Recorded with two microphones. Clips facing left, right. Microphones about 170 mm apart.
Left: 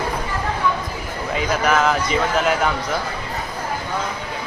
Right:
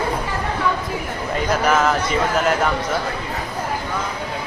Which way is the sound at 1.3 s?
Centre (ahead or behind).